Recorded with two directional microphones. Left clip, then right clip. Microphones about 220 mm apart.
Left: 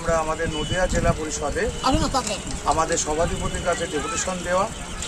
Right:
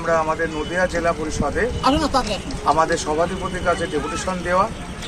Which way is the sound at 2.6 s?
5° left (ahead or behind).